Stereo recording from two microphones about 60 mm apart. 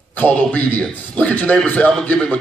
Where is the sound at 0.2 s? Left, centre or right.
Left.